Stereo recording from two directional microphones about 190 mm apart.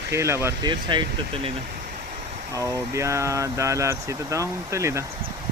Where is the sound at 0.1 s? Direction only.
15° right (ahead or behind).